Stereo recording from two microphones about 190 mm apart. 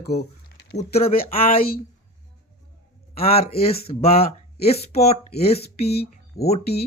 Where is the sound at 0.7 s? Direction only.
30° left (ahead or behind).